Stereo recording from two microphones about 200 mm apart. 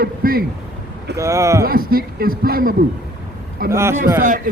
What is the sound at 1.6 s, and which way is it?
A man's voice, 50° right (ahead or behind).